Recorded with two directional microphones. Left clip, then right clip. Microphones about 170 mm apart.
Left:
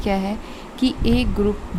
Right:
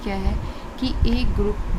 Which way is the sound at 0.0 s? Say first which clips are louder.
Left 6 dB; 50° left (ahead or behind).